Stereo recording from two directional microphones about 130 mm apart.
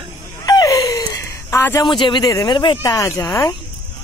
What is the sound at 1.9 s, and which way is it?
Speech, 35° left (ahead or behind).